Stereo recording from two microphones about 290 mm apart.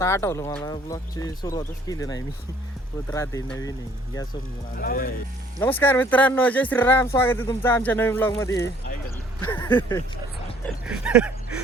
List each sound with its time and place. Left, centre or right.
0.0 s speech: centre
4.8 s speech: left
5.5 s speech: centre
10.8 s a sound: centre